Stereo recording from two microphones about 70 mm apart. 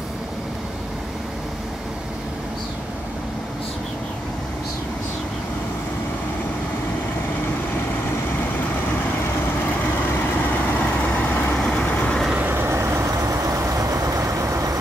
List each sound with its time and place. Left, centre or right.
9.2 s vehicle: left
11.5 s vehicle: centre
12.4 s vehicle: right
12.7 s vehicle: right